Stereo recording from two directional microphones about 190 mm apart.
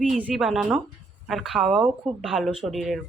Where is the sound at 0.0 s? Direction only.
5° right (ahead or behind).